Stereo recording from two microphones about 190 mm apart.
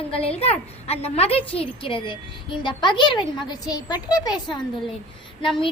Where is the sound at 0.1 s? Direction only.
30° left (ahead or behind).